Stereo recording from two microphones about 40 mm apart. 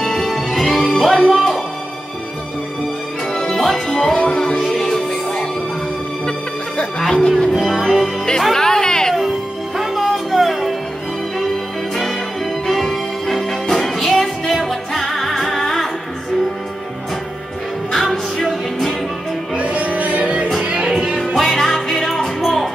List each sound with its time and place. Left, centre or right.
0.0 s music: centre
3.3 s music: centre
4.6 s music: centre
7.0 s music: centre
7.5 s music: centre
7.8 s music: centre
9.1 s music: centre
17.9 s music: centre
19.5 s music: right
20.8 s music: centre
21.4 s music: centre